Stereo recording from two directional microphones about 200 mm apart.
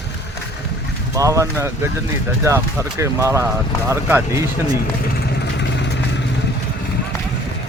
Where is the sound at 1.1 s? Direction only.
15° right (ahead or behind).